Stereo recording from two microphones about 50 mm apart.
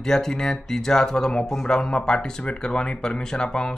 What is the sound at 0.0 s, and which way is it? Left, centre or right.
Speech, centre.